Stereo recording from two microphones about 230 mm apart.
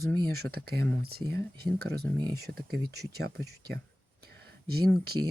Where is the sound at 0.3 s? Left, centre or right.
Right.